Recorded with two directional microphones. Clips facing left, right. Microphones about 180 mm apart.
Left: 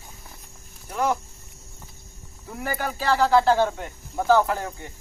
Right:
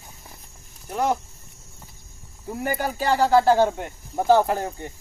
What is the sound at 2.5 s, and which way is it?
Speech, 25° right (ahead or behind).